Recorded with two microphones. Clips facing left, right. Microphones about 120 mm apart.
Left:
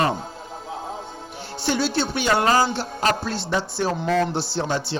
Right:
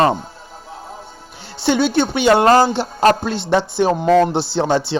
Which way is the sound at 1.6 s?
60° right (ahead or behind).